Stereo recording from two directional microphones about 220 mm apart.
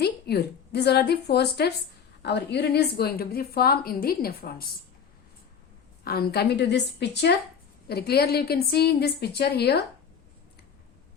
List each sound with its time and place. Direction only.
0.0 s a woman's voice: 45° left (ahead or behind)
6.1 s a woman's voice: 45° left (ahead or behind)